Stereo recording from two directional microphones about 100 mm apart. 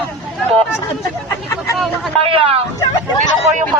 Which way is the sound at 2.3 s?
65° right (ahead or behind).